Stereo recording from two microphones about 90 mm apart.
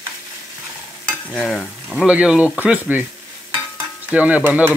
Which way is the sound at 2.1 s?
15° right (ahead or behind).